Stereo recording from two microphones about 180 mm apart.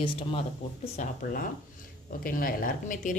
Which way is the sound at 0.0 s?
30° left (ahead or behind).